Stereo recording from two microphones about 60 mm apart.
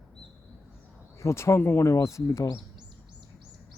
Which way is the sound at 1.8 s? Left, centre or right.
Left.